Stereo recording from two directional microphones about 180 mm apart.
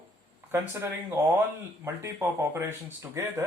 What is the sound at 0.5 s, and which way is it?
Speech, 15° right (ahead or behind).